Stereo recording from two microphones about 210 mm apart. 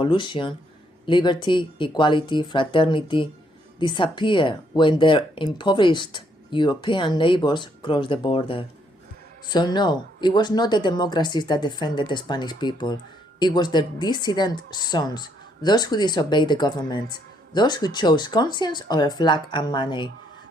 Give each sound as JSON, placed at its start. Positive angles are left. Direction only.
{"t": 0.0, "sound": "speech", "side_deg": 20}